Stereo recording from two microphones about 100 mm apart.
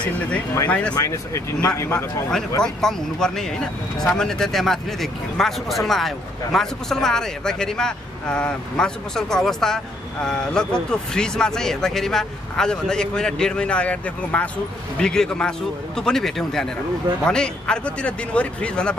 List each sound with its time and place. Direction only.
0.7 s speech: 10° left (ahead or behind)
0.9 s a man's voice: 30° left (ahead or behind)
2.6 s speech: 5° left (ahead or behind)